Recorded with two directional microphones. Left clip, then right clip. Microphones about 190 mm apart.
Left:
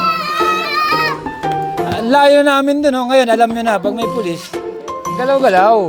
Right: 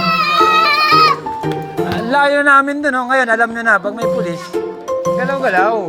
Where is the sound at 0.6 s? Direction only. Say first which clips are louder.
Right 4 dB; 30° left (ahead or behind).